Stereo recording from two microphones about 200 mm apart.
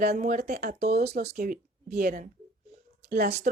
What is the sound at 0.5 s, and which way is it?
Speech, 50° right (ahead or behind).